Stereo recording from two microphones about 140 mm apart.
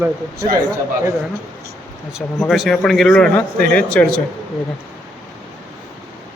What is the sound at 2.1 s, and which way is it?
Speech, centre (ahead or behind).